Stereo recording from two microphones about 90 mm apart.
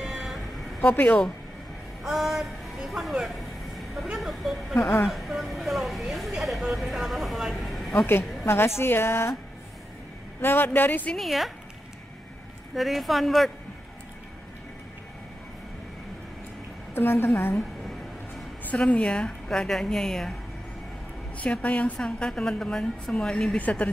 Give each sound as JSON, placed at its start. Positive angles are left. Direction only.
{"t": 0.0, "sound": "a sound", "side_deg": -5}
{"t": 0.7, "sound": "speech", "side_deg": 20}
{"t": 2.0, "sound": "music", "side_deg": -5}
{"t": 5.0, "sound": "speech", "side_deg": 0}
{"t": 8.5, "sound": "a woman's voice", "side_deg": 30}
{"t": 10.4, "sound": "a woman's voice", "side_deg": 25}
{"t": 11.1, "sound": "a woman's voice", "side_deg": 0}
{"t": 12.7, "sound": "a woman's voice", "side_deg": 0}
{"t": 16.9, "sound": "a woman's voice", "side_deg": 25}
{"t": 18.7, "sound": "a woman's voice", "side_deg": 15}
{"t": 21.4, "sound": "a woman's voice", "side_deg": 15}